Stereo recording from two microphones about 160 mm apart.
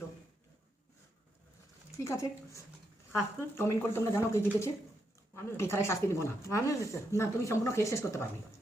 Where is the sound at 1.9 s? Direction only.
20° left (ahead or behind).